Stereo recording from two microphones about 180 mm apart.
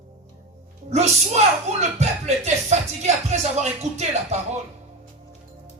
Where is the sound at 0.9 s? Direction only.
40° right (ahead or behind).